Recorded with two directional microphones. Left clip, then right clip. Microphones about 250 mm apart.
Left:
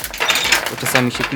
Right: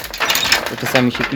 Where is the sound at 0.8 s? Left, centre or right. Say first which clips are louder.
Right 1 dB; centre.